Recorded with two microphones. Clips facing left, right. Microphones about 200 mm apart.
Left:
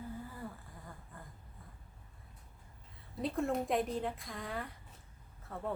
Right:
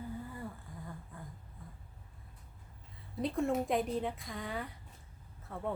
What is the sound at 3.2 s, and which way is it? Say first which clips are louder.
Speech: right 2 dB; centre (ahead or behind).